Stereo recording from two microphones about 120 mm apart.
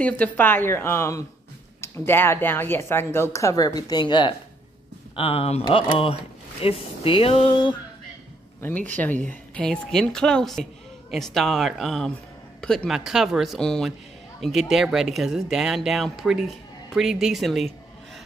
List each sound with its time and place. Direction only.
0.0 s speech: 15° left (ahead or behind); by 4.4 s 40° left (ahead or behind)
5.1 s speech: 55° left (ahead or behind)
8.9 s speech: 15° left (ahead or behind)